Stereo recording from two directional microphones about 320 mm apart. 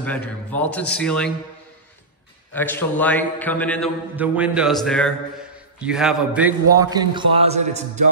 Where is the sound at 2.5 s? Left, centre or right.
Centre.